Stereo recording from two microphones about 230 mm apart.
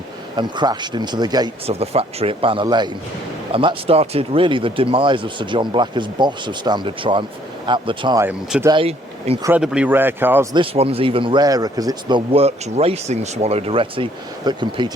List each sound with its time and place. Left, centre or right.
0.3 s speech: centre
8.7 s speech: right
9.4 s speech: centre
10.5 s speech: right